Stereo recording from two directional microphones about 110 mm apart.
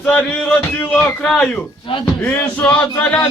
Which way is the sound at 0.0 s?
10° left (ahead or behind).